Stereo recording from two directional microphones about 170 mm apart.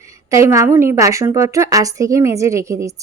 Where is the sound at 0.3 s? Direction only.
20° right (ahead or behind).